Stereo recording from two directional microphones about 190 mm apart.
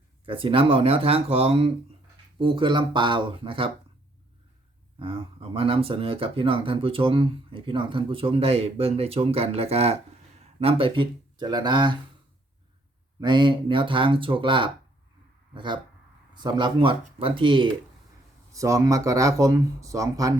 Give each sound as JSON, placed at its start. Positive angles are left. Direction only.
{"t": 0.3, "sound": "speech", "side_deg": -30}
{"t": 4.9, "sound": "speech", "side_deg": -30}
{"t": 13.1, "sound": "speech", "side_deg": -25}